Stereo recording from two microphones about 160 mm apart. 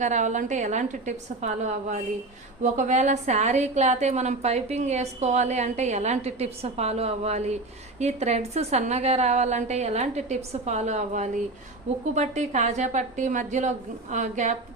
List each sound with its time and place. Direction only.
0.0 s a woman's voice: 50° right (ahead or behind)